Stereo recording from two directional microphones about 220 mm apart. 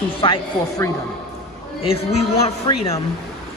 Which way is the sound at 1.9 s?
25° left (ahead or behind).